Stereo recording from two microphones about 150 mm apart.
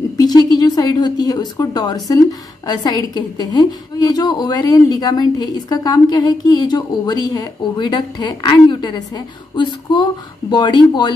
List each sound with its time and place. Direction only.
0.2 s a woman's voice: 25° left (ahead or behind)